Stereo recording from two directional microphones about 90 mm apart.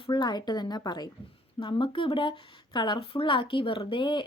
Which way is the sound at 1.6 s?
70° left (ahead or behind).